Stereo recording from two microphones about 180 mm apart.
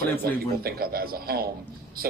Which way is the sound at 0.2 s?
55° right (ahead or behind).